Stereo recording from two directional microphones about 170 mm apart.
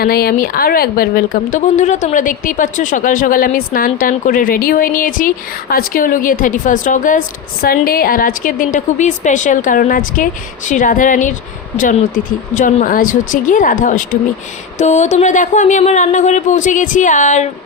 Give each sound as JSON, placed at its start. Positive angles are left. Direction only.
{"t": 0.0, "sound": "speech", "side_deg": 65}